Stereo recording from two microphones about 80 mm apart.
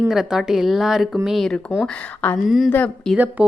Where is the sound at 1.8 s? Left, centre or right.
Centre.